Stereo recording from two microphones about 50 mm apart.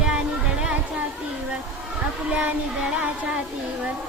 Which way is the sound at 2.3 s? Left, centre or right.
Right.